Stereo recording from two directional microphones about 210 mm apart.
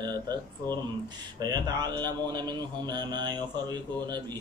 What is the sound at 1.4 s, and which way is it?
A man's voice, 20° right (ahead or behind).